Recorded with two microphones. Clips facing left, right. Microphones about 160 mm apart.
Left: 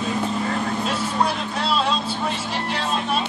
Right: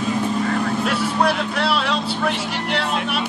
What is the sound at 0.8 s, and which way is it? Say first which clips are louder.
Vehicle: right 3 dB; 70° right (ahead or behind).